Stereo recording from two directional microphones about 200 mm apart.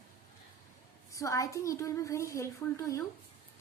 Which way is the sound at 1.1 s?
15° left (ahead or behind).